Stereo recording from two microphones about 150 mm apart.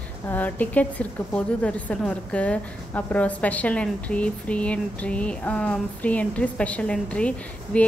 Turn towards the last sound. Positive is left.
turn(degrees=10)  # may be behind; listen again after turning